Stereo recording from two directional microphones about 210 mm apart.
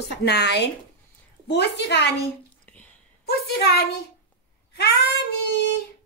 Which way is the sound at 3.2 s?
50° left (ahead or behind).